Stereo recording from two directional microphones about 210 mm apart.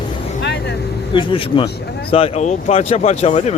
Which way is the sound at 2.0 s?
25° left (ahead or behind).